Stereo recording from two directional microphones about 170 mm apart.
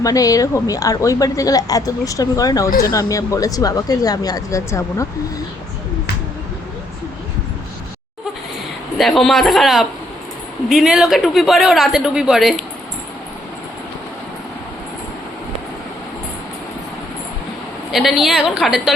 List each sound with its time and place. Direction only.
0.0 s a woman's voice: 20° left (ahead or behind)
2.6 s speech: 60° left (ahead or behind)
2.9 s a woman's voice: 20° left (ahead or behind)
9.0 s a man's voice: centre (ahead or behind)
17.9 s a man's voice: centre (ahead or behind)